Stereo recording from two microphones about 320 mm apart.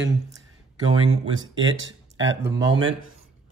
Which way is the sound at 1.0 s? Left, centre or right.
Right.